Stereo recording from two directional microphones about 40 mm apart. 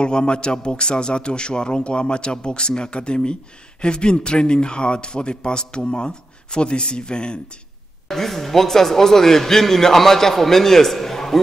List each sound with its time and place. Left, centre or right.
0.0 s a man's voice: left
8.1 s a man's voice: centre